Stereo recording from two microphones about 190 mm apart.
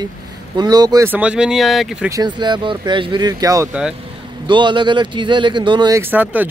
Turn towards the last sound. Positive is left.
turn(degrees=-10)  # may be behind; listen again after turning